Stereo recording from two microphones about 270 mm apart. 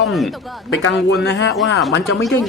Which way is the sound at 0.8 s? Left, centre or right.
Left.